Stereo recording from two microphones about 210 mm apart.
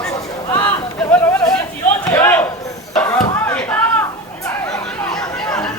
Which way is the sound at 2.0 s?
10° left (ahead or behind).